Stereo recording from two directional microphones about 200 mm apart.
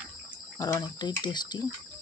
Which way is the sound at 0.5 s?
20° left (ahead or behind).